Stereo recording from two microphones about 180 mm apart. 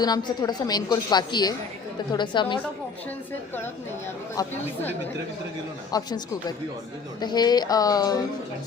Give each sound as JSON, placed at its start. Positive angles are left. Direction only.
{"t": 0.0, "sound": "a woman's voice", "side_deg": 25}
{"t": 4.4, "sound": "a woman's voice", "side_deg": 20}
{"t": 5.9, "sound": "a woman's voice", "side_deg": 25}